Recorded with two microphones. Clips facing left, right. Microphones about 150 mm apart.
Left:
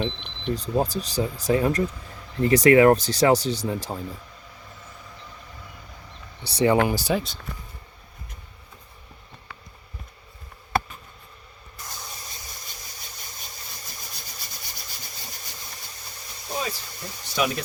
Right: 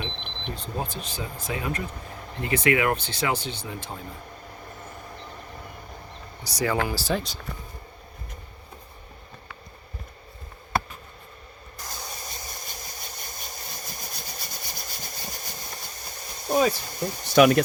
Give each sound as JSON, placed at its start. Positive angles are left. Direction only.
{"t": 0.2, "sound": "a sound", "side_deg": -50}
{"t": 0.5, "sound": "speech", "side_deg": 35}
{"t": 6.4, "sound": "speech", "side_deg": 30}
{"t": 11.9, "sound": "vehicle", "side_deg": -50}